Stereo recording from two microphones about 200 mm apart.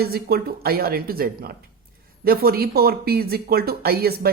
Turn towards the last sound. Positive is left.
turn(degrees=-50)  # may be behind; listen again after turning